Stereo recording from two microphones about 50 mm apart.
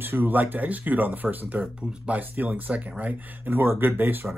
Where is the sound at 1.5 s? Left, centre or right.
Right.